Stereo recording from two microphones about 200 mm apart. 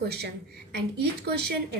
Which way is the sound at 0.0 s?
55° right (ahead or behind).